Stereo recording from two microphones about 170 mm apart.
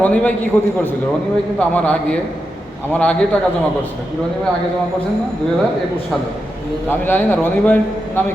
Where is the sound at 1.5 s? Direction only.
10° left (ahead or behind).